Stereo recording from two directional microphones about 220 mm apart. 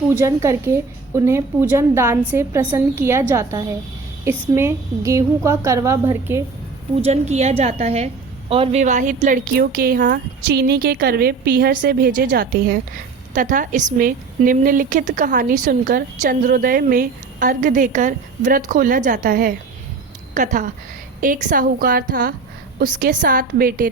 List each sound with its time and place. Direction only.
0.1 s a woman's voice: 10° right (ahead or behind)
7.0 s a woman's voice: 30° right (ahead or behind)